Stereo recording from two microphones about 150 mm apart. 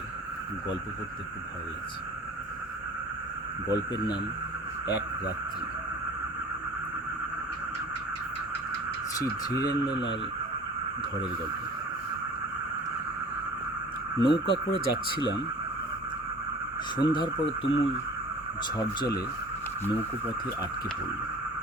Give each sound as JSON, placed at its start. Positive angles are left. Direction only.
{"t": 3.7, "sound": "speech", "side_deg": 30}
{"t": 9.1, "sound": "speech", "side_deg": 25}
{"t": 14.2, "sound": "speech", "side_deg": 35}
{"t": 17.0, "sound": "speech", "side_deg": 30}